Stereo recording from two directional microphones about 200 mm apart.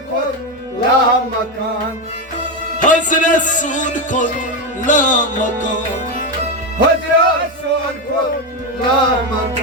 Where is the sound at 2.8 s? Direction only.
40° left (ahead or behind).